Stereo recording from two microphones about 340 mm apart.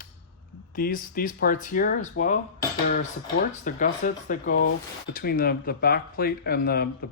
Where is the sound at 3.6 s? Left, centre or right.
Left.